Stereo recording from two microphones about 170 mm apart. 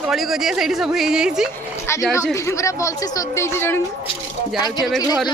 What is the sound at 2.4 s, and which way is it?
Speech, 15° left (ahead or behind).